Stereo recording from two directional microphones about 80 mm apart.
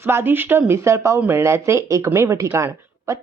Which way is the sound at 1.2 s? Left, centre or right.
Right.